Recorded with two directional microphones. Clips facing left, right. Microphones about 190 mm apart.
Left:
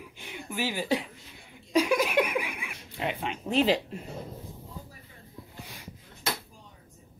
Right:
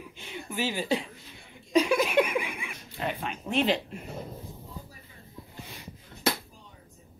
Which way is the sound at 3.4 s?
35° left (ahead or behind).